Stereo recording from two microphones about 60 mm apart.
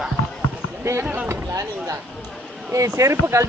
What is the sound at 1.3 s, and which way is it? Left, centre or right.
Speech, right.